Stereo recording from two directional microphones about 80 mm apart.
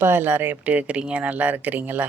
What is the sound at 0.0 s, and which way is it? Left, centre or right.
Speech, right.